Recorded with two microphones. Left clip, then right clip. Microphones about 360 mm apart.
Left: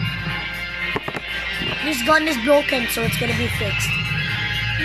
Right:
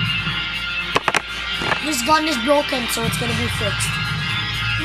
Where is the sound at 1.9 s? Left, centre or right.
Left.